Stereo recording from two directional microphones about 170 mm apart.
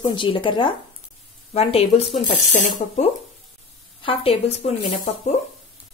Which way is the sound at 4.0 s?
35° left (ahead or behind).